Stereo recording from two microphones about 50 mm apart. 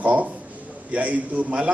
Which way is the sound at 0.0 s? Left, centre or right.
Right.